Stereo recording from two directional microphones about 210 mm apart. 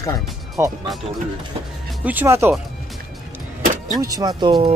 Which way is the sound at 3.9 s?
15° right (ahead or behind).